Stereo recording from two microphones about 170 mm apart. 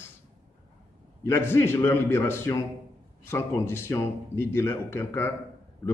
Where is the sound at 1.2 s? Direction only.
15° left (ahead or behind).